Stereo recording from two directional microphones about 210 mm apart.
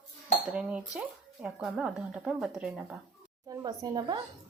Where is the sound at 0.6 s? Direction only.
5° right (ahead or behind).